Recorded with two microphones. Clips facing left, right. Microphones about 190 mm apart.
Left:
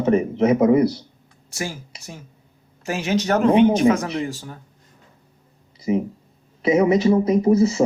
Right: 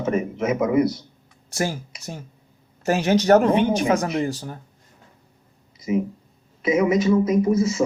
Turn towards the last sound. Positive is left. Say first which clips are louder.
# left 3 dB
turn(degrees=30)  # may be behind; listen again after turning